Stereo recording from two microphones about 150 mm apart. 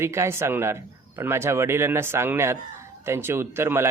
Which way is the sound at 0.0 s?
15° right (ahead or behind).